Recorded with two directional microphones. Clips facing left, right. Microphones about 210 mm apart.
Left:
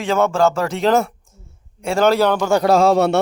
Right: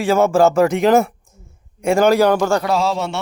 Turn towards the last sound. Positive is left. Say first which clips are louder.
# left 6 dB
turn(degrees=60)  # may be behind; listen again after turning